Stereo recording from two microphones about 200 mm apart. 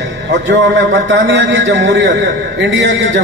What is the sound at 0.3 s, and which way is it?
A man's voice, 60° right (ahead or behind).